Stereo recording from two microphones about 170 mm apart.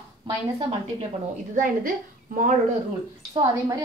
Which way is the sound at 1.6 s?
55° right (ahead or behind).